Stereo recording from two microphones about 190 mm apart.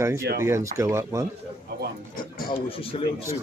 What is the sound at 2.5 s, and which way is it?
Speech, 30° left (ahead or behind).